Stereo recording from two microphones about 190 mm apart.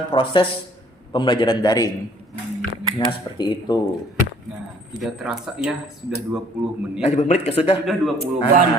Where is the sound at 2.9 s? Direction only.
20° left (ahead or behind).